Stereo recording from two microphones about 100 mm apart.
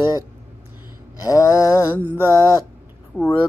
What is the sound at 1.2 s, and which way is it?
Mantra, 40° left (ahead or behind).